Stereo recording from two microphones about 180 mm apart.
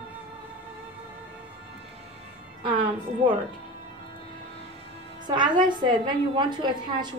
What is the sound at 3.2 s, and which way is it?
Speech, 30° right (ahead or behind).